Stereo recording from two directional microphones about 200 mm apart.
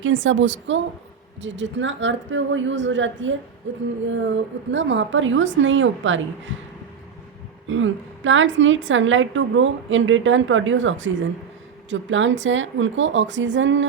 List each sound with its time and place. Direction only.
0.0 s a woman's voice: 70° right (ahead or behind)
7.7 s a woman's voice: 75° right (ahead or behind)